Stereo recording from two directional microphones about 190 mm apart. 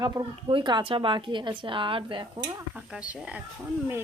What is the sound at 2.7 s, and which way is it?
Speech, 5° right (ahead or behind).